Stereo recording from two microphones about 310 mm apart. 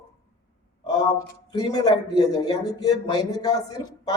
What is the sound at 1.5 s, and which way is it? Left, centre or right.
Speech, centre.